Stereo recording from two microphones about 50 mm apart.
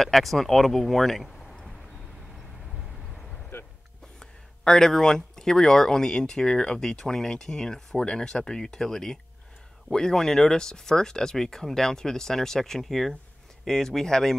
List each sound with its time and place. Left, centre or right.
0.0 s speech: centre
3.5 s music: left
4.2 s speech: centre